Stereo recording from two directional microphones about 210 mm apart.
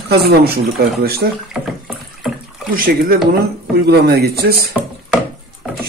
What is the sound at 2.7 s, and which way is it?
Speech, 45° right (ahead or behind).